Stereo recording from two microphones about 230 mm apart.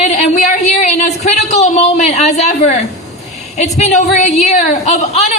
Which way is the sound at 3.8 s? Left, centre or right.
Left.